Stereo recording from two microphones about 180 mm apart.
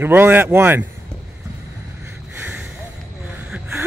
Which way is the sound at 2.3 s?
10° right (ahead or behind).